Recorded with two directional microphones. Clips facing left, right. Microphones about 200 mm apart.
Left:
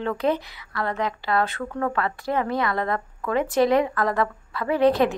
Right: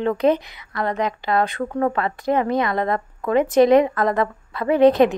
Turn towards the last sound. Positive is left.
turn(degrees=-20)  # may be behind; listen again after turning